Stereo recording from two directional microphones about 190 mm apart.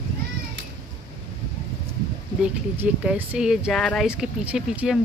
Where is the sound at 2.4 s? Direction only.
5° right (ahead or behind).